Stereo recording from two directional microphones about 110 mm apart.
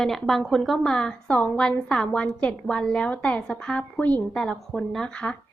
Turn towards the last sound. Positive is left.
turn(degrees=10)  # may be behind; listen again after turning